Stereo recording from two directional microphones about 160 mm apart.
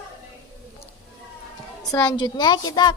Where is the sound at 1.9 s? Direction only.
25° left (ahead or behind).